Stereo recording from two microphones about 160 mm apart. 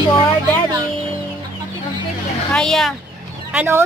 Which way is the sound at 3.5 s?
10° right (ahead or behind).